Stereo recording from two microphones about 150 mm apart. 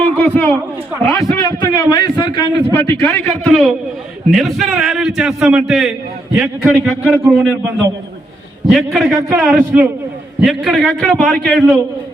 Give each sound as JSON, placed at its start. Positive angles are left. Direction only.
{"t": 0.0, "sound": "a sound", "side_deg": 10}
{"t": 1.2, "sound": "a man's voice", "side_deg": 25}
{"t": 3.0, "sound": "a man's voice", "side_deg": 5}